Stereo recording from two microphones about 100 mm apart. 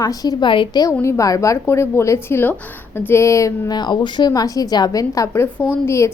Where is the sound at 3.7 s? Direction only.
50° left (ahead or behind).